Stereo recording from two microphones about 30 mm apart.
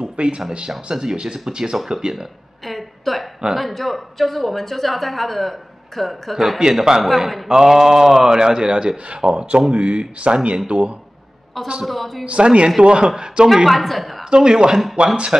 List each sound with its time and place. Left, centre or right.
0.0 s speech: right
0.7 s speech: right
2.6 s a sound: centre
3.5 s a woman's voice: centre
6.6 s speech: centre
7.0 s a woman's voice: centre
7.4 s mantra: right
8.4 s speech: right
11.8 s a woman's voice: centre
12.3 s speech: right
13.7 s a woman's voice: centre
14.3 s speech: right
15.0 s speech: right